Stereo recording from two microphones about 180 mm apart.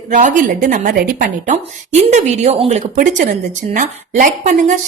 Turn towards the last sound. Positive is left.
turn(degrees=-45)  # may be behind; listen again after turning